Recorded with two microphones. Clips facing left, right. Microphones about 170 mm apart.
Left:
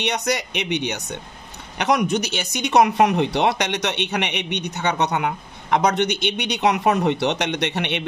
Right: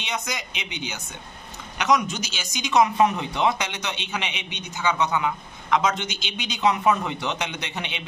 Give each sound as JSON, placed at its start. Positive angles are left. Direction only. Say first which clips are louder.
{"t": 0.0, "sound": "speech", "louder": "left 8 dB", "side_deg": 70}